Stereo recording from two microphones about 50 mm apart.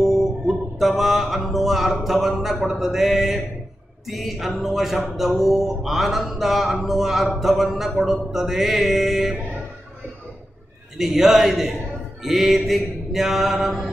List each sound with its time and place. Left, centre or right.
0.0 s music: centre
2.7 s speech: centre
11.0 s a man's voice: centre